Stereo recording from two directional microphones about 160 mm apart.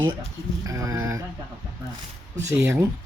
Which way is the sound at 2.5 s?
15° right (ahead or behind).